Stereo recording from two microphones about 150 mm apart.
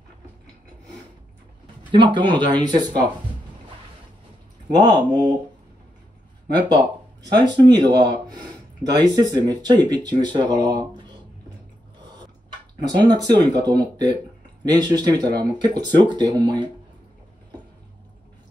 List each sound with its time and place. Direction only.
1.9 s speech: 30° right (ahead or behind)
4.6 s speech: 30° right (ahead or behind)
6.7 s speech: 30° right (ahead or behind)
12.8 s speech: 30° right (ahead or behind)